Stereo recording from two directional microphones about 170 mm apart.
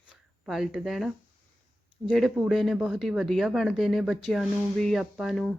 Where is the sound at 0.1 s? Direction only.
Centre (ahead or behind).